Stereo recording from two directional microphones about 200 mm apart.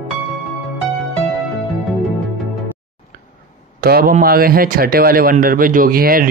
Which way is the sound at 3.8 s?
50° right (ahead or behind).